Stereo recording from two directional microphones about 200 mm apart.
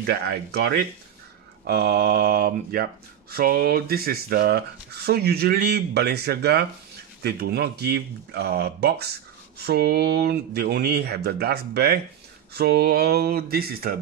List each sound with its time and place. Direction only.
0.0 s speech: 55° right (ahead or behind)